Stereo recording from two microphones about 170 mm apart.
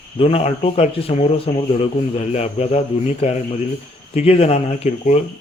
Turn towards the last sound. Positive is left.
turn(degrees=40)  # may be behind; listen again after turning